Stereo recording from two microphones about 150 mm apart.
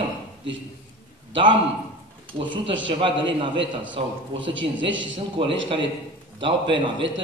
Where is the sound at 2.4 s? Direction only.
35° right (ahead or behind).